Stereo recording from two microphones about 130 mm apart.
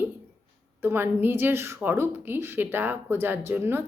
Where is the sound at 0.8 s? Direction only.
15° right (ahead or behind).